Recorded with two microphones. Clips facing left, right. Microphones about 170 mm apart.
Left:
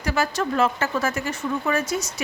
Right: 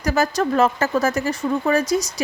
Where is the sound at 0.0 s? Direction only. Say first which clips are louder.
Right 4 dB; 40° right (ahead or behind).